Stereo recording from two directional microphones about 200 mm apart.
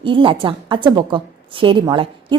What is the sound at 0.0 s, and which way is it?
A woman's voice, 25° right (ahead or behind).